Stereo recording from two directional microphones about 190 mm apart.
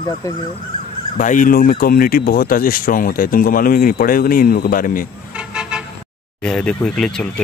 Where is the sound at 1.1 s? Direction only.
45° left (ahead or behind).